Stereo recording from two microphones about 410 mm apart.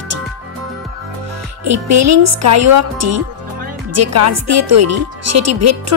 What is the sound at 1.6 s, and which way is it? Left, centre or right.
Speech, right.